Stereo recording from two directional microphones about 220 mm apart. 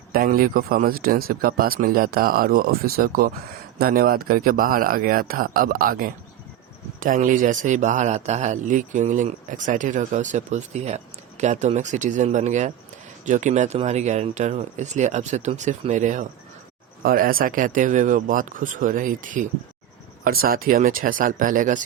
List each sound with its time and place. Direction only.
0.1 s a man's voice: 40° right (ahead or behind)